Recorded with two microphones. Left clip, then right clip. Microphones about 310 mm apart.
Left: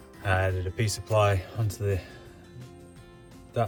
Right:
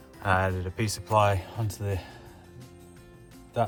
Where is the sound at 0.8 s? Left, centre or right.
Centre.